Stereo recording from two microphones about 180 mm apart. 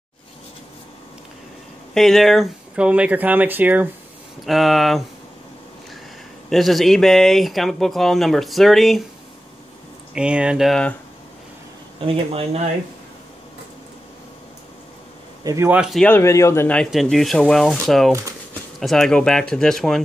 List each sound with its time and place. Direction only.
2.0 s speech: centre (ahead or behind)
6.5 s speech: centre (ahead or behind)
10.1 s speech: 5° right (ahead or behind)
12.1 s speech: 35° right (ahead or behind)
15.4 s speech: 15° right (ahead or behind)
16.1 s speech: 15° left (ahead or behind)